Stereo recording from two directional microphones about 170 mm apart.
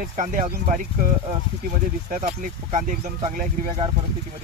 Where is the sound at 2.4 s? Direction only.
50° right (ahead or behind).